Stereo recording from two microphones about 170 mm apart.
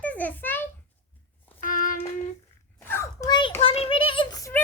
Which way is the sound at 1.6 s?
55° left (ahead or behind).